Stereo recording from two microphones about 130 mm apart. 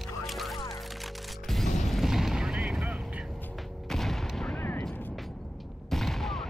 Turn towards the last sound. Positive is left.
turn(degrees=0)  # may be behind; listen again after turning